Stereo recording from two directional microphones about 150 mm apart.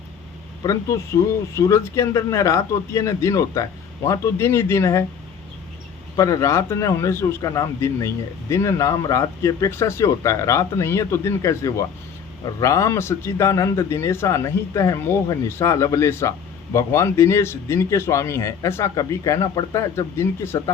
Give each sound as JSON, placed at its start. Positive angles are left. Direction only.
{"t": 0.6, "sound": "a man's voice", "side_deg": 20}
{"t": 6.1, "sound": "a man's voice", "side_deg": 20}